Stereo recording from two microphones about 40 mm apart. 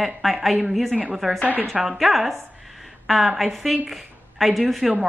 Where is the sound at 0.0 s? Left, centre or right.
Centre.